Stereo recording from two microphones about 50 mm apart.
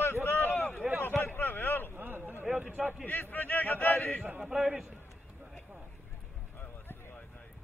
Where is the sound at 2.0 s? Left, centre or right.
Right.